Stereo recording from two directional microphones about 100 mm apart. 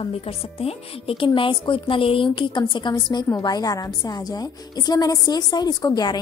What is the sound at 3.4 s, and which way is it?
A woman's voice, 40° left (ahead or behind).